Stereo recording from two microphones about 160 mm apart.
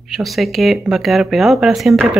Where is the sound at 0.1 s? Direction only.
Centre (ahead or behind).